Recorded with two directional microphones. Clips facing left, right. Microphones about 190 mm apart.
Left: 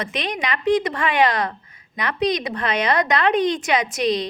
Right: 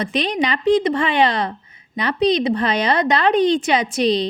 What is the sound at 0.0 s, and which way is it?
A woman's voice, 30° right (ahead or behind).